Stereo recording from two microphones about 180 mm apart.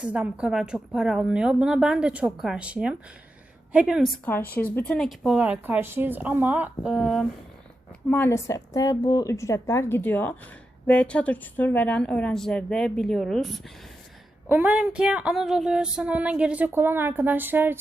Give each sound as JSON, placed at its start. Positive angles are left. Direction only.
{"t": 0.0, "sound": "a woman's voice", "side_deg": -5}
{"t": 4.5, "sound": "a woman's voice", "side_deg": 10}
{"t": 8.1, "sound": "a woman's voice", "side_deg": 15}